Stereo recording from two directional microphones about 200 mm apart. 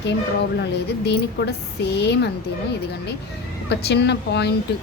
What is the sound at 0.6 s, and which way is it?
A woman's voice, 60° left (ahead or behind).